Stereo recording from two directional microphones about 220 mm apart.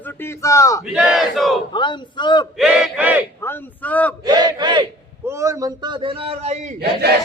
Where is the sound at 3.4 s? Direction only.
10° left (ahead or behind).